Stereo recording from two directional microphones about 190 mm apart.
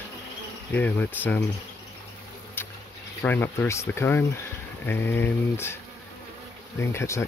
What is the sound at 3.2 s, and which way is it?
Speech, 10° left (ahead or behind).